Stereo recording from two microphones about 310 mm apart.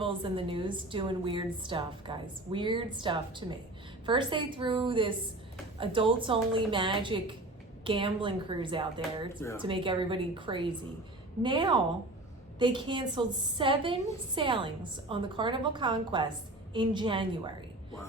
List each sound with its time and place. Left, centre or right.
0.0 s a woman's voice: centre
9.0 s speech: centre
9.6 s a woman's voice: centre